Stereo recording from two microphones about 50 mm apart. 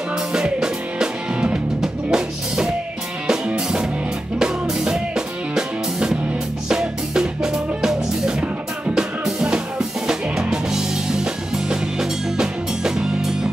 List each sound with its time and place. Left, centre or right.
0.3 s music: centre